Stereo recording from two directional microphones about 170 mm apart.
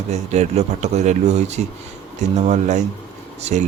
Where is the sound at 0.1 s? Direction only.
40° right (ahead or behind).